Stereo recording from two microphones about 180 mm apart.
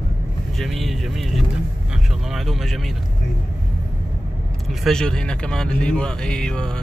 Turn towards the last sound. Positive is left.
turn(degrees=5)  # may be behind; listen again after turning